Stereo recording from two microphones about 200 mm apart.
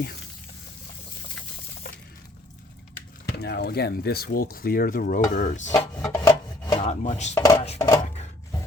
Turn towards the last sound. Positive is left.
turn(degrees=15)  # may be behind; listen again after turning